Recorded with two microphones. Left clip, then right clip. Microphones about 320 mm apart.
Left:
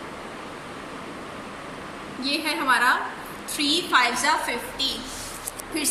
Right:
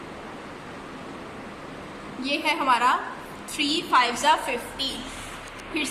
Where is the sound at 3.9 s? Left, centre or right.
Right.